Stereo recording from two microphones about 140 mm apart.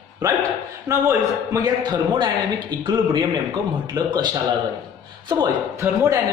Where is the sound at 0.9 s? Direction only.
25° right (ahead or behind).